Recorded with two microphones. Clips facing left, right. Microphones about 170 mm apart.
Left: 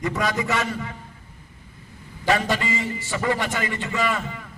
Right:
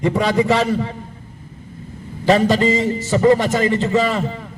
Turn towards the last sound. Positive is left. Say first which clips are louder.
# right 6 dB
turn(degrees=-30)  # may be behind; listen again after turning